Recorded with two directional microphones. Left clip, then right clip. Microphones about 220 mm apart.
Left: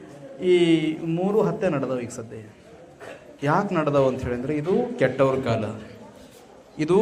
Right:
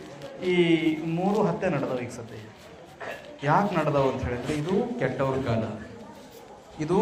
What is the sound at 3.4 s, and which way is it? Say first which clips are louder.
A man's voice: left 1 dB; 50° left (ahead or behind).